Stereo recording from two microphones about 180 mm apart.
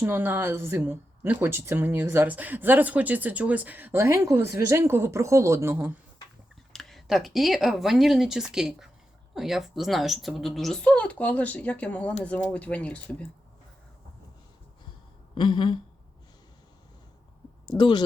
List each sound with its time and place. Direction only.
0.0 s a woman's voice: 10° right (ahead or behind)
6.7 s speech: centre (ahead or behind)
15.4 s speech: 25° left (ahead or behind)
17.7 s speech: 25° left (ahead or behind)